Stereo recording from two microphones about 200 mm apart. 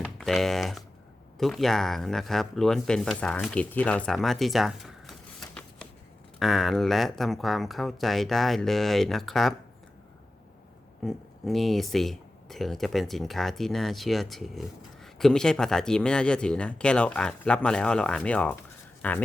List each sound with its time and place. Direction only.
0.2 s speech: centre (ahead or behind)
11.0 s speech: centre (ahead or behind)